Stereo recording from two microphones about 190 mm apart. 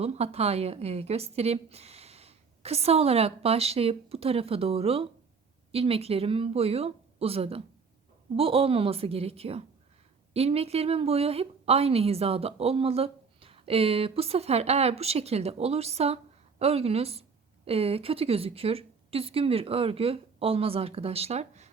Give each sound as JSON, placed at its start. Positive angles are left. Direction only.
{"t": 0.0, "sound": "a woman's voice", "side_deg": -35}